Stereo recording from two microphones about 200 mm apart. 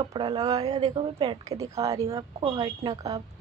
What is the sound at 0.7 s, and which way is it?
A woman's voice, 30° right (ahead or behind).